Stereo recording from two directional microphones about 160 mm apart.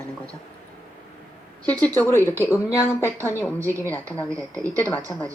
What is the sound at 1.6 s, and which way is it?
Speech, 10° left (ahead or behind).